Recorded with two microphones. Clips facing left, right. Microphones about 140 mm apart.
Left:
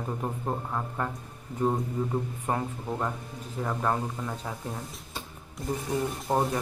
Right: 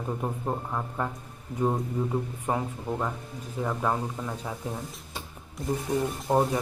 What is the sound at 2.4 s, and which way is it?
Speech, 5° right (ahead or behind).